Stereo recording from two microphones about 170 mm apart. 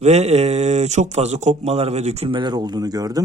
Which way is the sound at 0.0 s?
40° right (ahead or behind).